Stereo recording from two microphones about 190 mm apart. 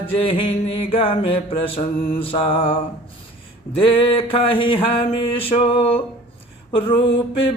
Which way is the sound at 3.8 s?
30° left (ahead or behind).